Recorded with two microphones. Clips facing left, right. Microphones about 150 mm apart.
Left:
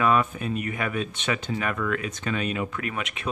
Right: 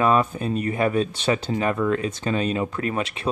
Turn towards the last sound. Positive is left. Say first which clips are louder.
# right 5 dB
turn(degrees=-30)  # may be behind; listen again after turning